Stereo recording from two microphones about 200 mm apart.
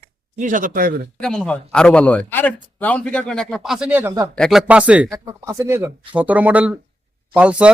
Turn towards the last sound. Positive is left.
turn(degrees=-5)  # may be behind; listen again after turning